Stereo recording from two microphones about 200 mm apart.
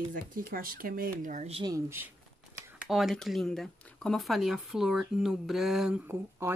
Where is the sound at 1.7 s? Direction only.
10° right (ahead or behind).